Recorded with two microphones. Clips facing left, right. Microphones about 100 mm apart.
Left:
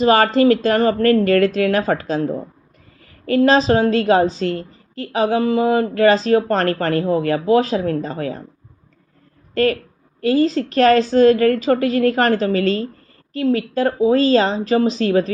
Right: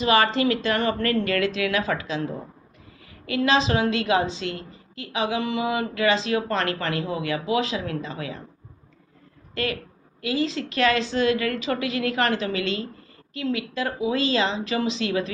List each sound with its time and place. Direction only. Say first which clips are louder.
0.0 s a woman's voice: left 7 dB; 40° left (ahead or behind)
9.6 s a woman's voice: left 11 dB; 40° left (ahead or behind)